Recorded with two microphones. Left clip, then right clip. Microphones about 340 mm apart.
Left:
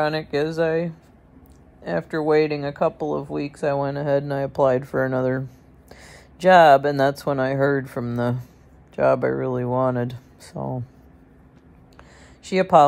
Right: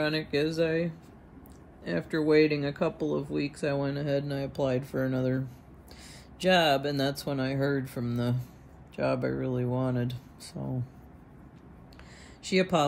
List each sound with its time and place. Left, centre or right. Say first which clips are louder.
0.0 s speech: left 6 dB; centre
12.4 s speech: left 11 dB; centre